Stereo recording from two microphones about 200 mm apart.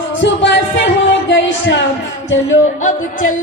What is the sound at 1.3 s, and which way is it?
Music, 65° left (ahead or behind).